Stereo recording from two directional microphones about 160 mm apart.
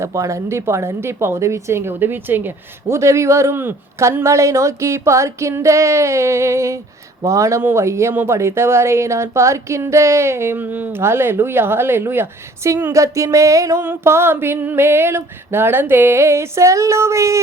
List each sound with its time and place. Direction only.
0.0 s speech: 20° right (ahead or behind)